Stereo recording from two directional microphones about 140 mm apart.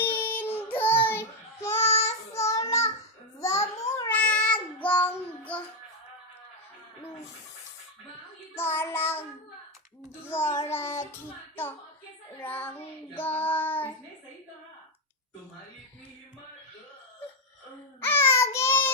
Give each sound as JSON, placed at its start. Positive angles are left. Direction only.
{"t": 0.0, "sound": "child singing", "side_deg": 15}
{"t": 0.8, "sound": "babbling", "side_deg": 15}
{"t": 1.8, "sound": "child singing", "side_deg": 50}
{"t": 2.3, "sound": "child singing", "side_deg": 20}
{"t": 3.8, "sound": "a sound", "side_deg": 20}
{"t": 4.1, "sound": "child singing", "side_deg": 10}
{"t": 8.5, "sound": "child singing", "side_deg": 15}
{"t": 10.2, "sound": "child singing", "side_deg": 15}
{"t": 12.4, "sound": "child singing", "side_deg": 15}
{"t": 18.0, "sound": "child singing", "side_deg": 15}